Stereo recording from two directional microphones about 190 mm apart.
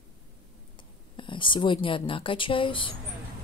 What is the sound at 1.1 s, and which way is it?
Speech, 25° left (ahead or behind).